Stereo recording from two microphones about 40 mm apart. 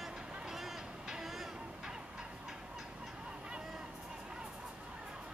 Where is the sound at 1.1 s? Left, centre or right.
Centre.